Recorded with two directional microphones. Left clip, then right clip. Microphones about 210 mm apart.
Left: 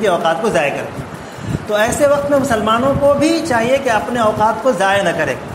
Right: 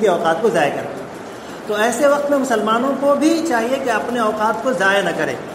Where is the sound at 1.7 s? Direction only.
40° left (ahead or behind).